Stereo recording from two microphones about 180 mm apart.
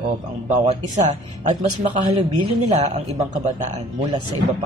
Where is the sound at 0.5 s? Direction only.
40° right (ahead or behind).